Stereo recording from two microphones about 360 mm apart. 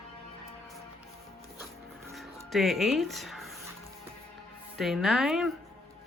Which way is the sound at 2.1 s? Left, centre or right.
Centre.